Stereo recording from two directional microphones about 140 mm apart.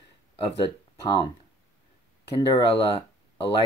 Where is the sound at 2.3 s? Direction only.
40° left (ahead or behind).